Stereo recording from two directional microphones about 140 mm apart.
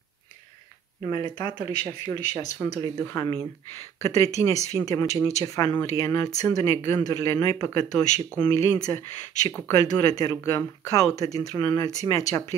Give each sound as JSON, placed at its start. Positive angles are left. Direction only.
{"t": 1.0, "sound": "speech", "side_deg": 30}